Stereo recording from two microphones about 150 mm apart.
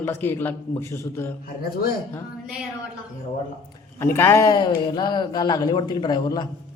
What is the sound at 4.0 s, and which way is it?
Speech, 15° left (ahead or behind).